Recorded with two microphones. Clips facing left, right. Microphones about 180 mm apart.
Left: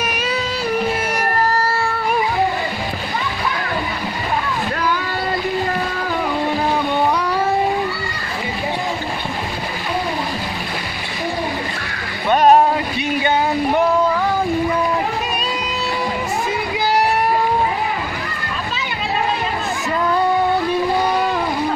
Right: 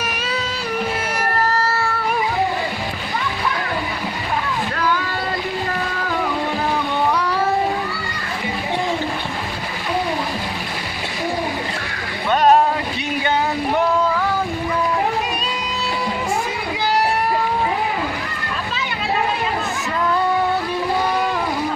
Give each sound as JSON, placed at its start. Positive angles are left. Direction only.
{"t": 12.3, "sound": "boat", "side_deg": 15}